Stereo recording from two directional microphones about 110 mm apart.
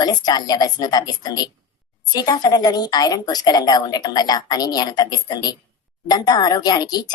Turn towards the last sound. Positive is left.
turn(degrees=40)  # may be behind; listen again after turning